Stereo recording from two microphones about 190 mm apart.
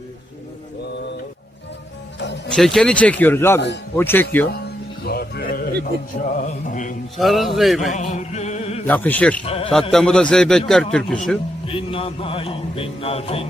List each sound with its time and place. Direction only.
2.1 s music: 65° left (ahead or behind)
2.5 s speech: centre (ahead or behind)
4.5 s music: 55° left (ahead or behind)
5.8 s speech: 45° left (ahead or behind)
7.2 s a man's voice: centre (ahead or behind)
7.9 s music: 40° left (ahead or behind)
8.9 s speech: 10° left (ahead or behind)
9.5 s a man's voice: 30° left (ahead or behind)
9.9 s a man's voice: 5° left (ahead or behind)
11.7 s a man's voice: 30° left (ahead or behind)